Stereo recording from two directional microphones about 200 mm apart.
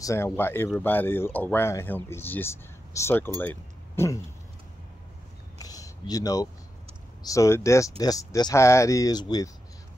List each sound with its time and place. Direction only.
0.0 s speech: 15° left (ahead or behind)
5.6 s a sound: 20° left (ahead or behind)
7.2 s speech: 15° left (ahead or behind)